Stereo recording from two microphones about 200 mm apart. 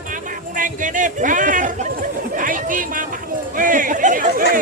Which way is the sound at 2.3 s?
40° right (ahead or behind).